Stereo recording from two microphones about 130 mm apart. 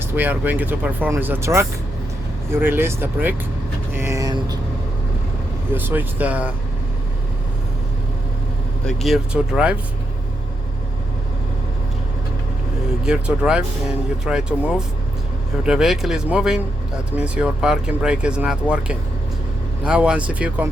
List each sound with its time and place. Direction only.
0.0 s speech: 15° right (ahead or behind)
3.9 s vehicle: 20° right (ahead or behind)
5.7 s speech: 15° right (ahead or behind)
8.9 s speech: centre (ahead or behind)
13.1 s speech: 5° right (ahead or behind)